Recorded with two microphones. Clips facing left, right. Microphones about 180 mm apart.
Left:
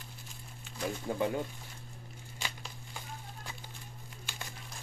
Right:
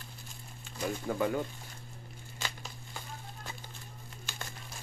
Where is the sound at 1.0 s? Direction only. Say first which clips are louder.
Right 1 dB; 20° left (ahead or behind).